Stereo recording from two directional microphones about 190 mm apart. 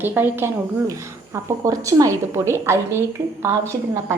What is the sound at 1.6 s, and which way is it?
Speech, 20° right (ahead or behind).